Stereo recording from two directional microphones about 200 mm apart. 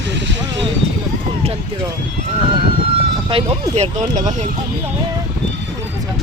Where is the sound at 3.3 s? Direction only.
30° right (ahead or behind).